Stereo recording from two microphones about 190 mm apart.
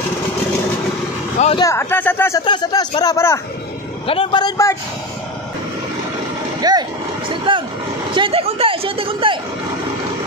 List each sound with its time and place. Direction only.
1.6 s a man's voice: 15° left (ahead or behind)
6.6 s a sound: 20° right (ahead or behind)
8.1 s speech: 25° right (ahead or behind)